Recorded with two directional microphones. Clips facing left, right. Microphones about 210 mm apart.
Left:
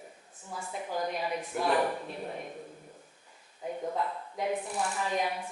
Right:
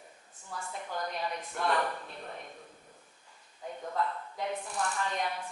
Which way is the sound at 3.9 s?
10° left (ahead or behind).